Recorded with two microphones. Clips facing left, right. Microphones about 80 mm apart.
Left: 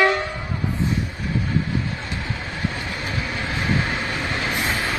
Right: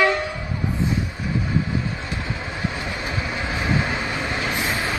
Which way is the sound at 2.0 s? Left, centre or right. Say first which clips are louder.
Right 1 dB; centre.